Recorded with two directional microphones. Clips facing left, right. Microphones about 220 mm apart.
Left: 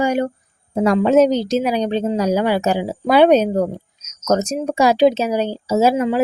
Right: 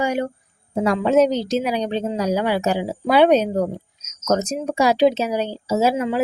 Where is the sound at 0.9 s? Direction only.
45° left (ahead or behind).